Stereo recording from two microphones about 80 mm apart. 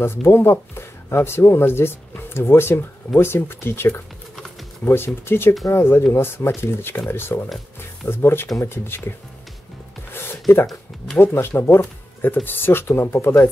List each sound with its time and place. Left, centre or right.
0.0 s speech: left
7.4 s music: centre
8.1 s speech: left
11.3 s speech: left